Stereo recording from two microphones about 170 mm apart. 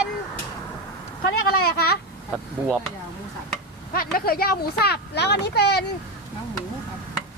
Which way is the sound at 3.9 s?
60° left (ahead or behind).